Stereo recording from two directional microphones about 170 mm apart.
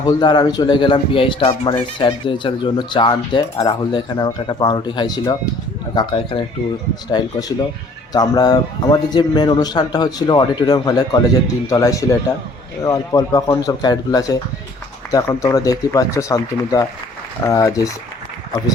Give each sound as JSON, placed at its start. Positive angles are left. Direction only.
{"t": 0.0, "sound": "speech", "side_deg": 20}